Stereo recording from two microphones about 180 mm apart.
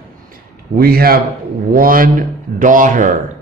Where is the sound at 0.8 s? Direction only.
55° right (ahead or behind).